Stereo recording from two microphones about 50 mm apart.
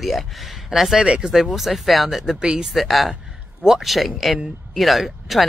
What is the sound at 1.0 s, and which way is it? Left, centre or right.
Speech, right.